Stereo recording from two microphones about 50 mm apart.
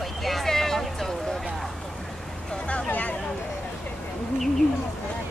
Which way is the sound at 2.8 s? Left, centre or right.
Left.